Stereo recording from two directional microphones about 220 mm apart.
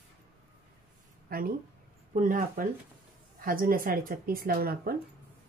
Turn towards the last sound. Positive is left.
turn(degrees=-45)  # may be behind; listen again after turning